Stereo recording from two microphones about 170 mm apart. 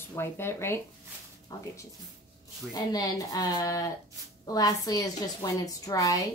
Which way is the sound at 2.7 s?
20° left (ahead or behind).